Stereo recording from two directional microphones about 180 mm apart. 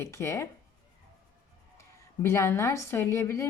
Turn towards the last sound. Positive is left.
turn(degrees=15)  # may be behind; listen again after turning